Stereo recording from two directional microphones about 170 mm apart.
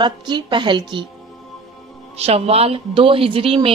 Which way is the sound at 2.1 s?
35° right (ahead or behind).